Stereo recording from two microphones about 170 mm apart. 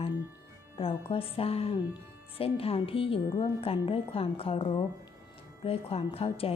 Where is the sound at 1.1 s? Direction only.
35° left (ahead or behind).